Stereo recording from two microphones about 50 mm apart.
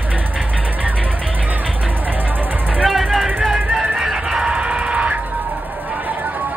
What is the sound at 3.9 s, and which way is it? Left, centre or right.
Music, centre.